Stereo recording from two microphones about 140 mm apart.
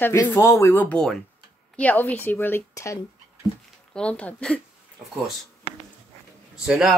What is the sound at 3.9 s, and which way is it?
Speech, 10° left (ahead or behind).